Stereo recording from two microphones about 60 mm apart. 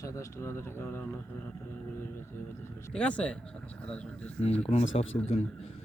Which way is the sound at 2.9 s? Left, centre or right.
Left.